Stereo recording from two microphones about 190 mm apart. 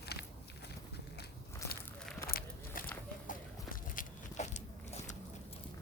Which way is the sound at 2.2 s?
50° left (ahead or behind).